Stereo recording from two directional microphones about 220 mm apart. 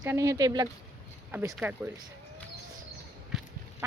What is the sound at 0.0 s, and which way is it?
Speech, 15° right (ahead or behind).